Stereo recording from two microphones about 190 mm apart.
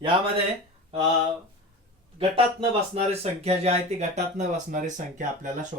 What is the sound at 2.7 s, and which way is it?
Speech, 35° right (ahead or behind).